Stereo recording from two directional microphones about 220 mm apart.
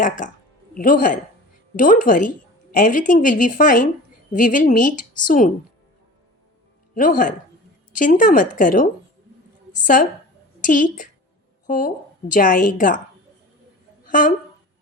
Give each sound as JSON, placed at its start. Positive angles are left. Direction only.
{"t": 0.2, "sound": "a woman's voice", "side_deg": 35}
{"t": 6.9, "sound": "a woman's voice", "side_deg": 40}
{"t": 14.1, "sound": "a woman's voice", "side_deg": 40}